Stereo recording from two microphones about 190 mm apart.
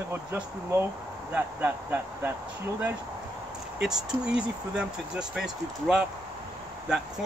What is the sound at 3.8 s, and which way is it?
Speech, 5° right (ahead or behind).